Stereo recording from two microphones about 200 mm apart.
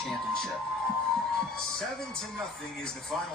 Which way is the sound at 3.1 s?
Centre (ahead or behind).